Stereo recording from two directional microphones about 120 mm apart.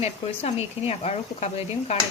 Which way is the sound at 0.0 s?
60° left (ahead or behind).